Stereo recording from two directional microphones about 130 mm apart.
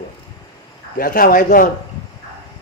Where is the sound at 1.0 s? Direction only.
90° left.